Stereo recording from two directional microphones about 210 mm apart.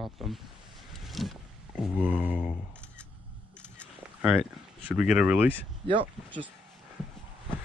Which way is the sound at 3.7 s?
5° right (ahead or behind).